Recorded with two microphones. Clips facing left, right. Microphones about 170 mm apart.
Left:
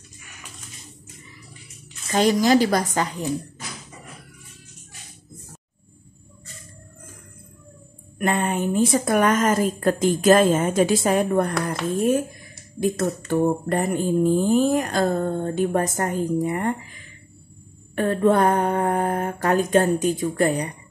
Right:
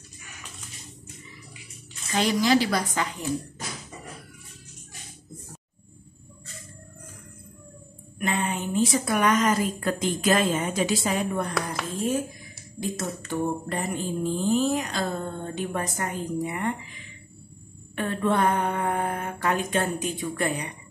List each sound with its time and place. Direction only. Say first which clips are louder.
2.1 s mantra: left 5 dB; 45° left (ahead or behind)
8.2 s mantra: left 5 dB; 50° left (ahead or behind)
11.9 s speech: left 6 dB; 60° left (ahead or behind)
12.8 s mantra: left 8 dB; 55° left (ahead or behind); by 20.7 s 40° left (ahead or behind)